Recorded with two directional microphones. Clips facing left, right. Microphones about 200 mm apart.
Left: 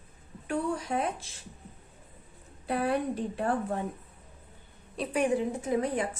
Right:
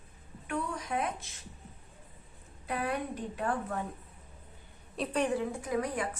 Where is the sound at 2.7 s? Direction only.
30° left (ahead or behind).